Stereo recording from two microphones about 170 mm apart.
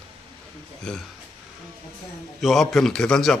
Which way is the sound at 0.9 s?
5° left (ahead or behind).